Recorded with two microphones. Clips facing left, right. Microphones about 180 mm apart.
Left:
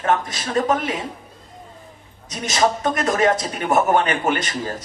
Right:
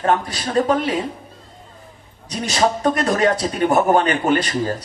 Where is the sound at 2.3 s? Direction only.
35° right (ahead or behind).